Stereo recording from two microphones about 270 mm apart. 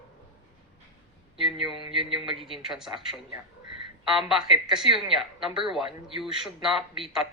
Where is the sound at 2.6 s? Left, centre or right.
Centre.